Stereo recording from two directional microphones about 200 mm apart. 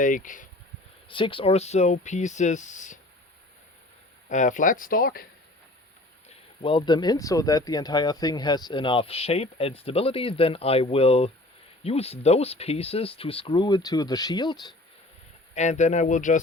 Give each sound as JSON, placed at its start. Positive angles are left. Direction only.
{"t": 0.0, "sound": "speech", "side_deg": 40}
{"t": 1.0, "sound": "speech", "side_deg": 25}
{"t": 4.3, "sound": "speech", "side_deg": 40}
{"t": 6.2, "sound": "speech", "side_deg": 25}
{"t": 15.5, "sound": "speech", "side_deg": 35}